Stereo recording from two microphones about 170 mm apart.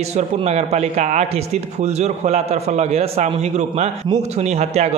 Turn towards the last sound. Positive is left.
turn(degrees=-40)  # may be behind; listen again after turning